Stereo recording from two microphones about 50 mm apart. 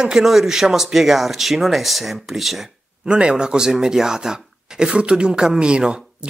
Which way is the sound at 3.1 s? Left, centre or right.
Centre.